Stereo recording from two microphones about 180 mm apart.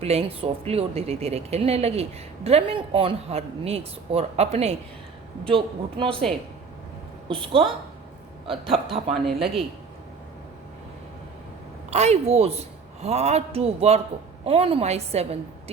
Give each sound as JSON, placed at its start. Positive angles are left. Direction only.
{"t": 0.0, "sound": "a woman's voice", "side_deg": -35}
{"t": 7.3, "sound": "speech", "side_deg": -30}
{"t": 8.7, "sound": "a woman's voice", "side_deg": -30}
{"t": 9.2, "sound": "a woman's voice", "side_deg": 0}
{"t": 11.9, "sound": "a woman's voice", "side_deg": -40}